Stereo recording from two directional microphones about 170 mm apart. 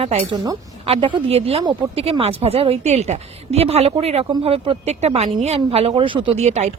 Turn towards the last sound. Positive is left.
turn(degrees=-40)  # may be behind; listen again after turning